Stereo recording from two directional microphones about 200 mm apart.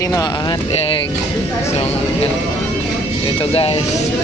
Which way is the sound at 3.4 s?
30° left (ahead or behind).